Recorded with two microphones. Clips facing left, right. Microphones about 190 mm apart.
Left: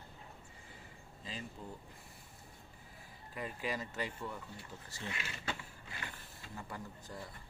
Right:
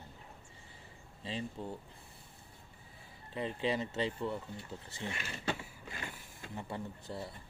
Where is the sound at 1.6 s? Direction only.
30° right (ahead or behind).